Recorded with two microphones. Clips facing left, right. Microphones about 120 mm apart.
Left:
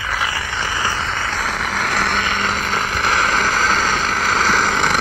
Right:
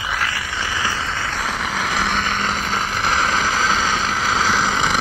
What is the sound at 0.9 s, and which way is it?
Vehicle, 65° left (ahead or behind).